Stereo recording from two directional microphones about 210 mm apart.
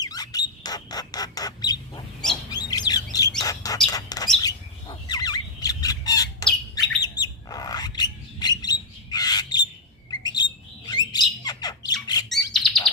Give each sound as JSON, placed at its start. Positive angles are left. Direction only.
{"t": 0.0, "sound": "bird", "side_deg": 20}
{"t": 4.4, "sound": "squawk", "side_deg": 20}
{"t": 7.0, "sound": "bird", "side_deg": 20}
{"t": 10.9, "sound": "squawk", "side_deg": 20}
{"t": 12.5, "sound": "bird", "side_deg": 0}